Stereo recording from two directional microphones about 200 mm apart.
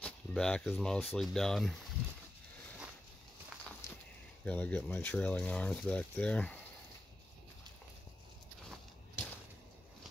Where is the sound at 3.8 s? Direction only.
15° left (ahead or behind).